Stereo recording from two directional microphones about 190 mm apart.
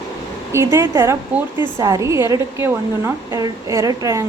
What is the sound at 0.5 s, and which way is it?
A woman's voice, 15° right (ahead or behind).